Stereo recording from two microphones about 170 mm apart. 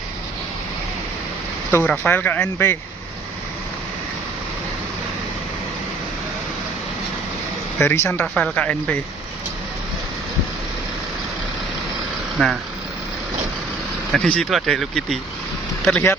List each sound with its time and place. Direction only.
1.7 s speech: 10° left (ahead or behind)
7.8 s speech: 15° left (ahead or behind)
12.4 s speech: 5° left (ahead or behind)
14.1 s speech: centre (ahead or behind)